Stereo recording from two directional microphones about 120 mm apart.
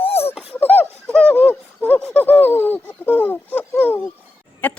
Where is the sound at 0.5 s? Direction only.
15° left (ahead or behind).